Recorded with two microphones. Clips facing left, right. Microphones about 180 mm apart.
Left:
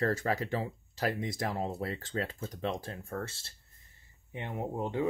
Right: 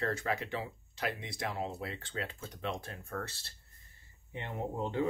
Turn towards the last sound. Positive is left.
turn(degrees=15)  # may be behind; listen again after turning